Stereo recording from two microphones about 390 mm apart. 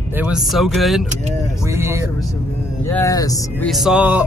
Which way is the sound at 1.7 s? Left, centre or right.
Centre.